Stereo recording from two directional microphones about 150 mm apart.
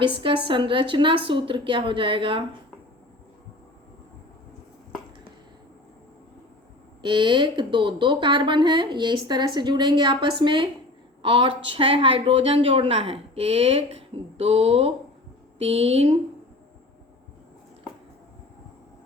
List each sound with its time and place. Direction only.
0.0 s a woman's voice: 35° right (ahead or behind)
7.0 s a woman's voice: 30° right (ahead or behind)